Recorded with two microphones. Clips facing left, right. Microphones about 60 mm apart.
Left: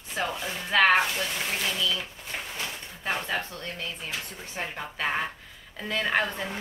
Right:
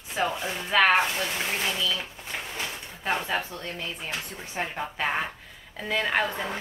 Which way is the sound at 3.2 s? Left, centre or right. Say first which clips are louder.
Right 2 dB; centre.